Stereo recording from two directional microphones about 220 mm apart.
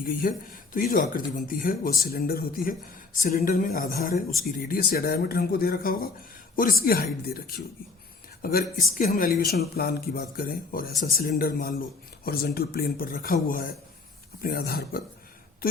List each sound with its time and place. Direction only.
0.0 s speech: 40° left (ahead or behind)